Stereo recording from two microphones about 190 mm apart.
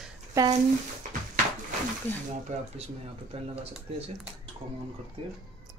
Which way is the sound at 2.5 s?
40° right (ahead or behind).